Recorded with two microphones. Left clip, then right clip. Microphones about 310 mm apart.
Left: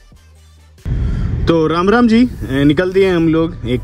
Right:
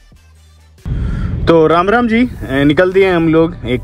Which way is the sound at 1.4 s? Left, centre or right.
Centre.